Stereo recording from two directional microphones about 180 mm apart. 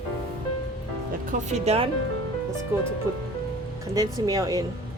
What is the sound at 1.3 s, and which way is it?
Speech, 40° right (ahead or behind).